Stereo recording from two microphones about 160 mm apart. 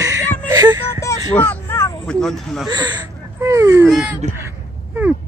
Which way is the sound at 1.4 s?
15° left (ahead or behind).